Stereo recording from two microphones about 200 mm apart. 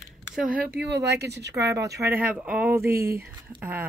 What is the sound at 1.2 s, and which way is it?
Speech, 55° right (ahead or behind).